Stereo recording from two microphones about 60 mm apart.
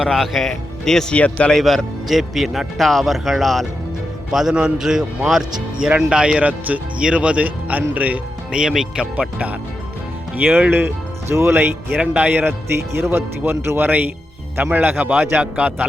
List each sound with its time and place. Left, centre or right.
0.1 s speech: centre
1.1 s a man's voice: centre
1.5 s a man's voice: centre; by 8.2 s right
8.5 s a man's voice: centre
10.3 s speech: right
11.9 s speech: right
13.0 s speech: right